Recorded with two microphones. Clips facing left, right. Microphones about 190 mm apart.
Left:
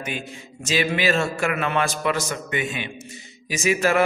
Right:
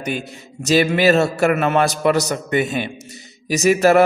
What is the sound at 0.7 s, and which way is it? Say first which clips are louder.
A man's voice: right 7 dB; 40° right (ahead or behind).